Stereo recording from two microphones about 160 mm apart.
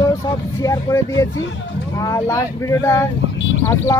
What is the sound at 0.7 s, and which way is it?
Speech, 20° left (ahead or behind).